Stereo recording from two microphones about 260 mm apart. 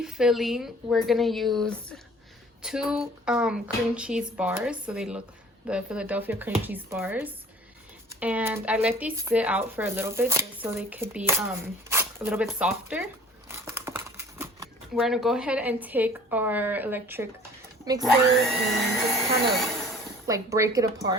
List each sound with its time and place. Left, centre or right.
0.0 s speech: centre
20.2 s speech: centre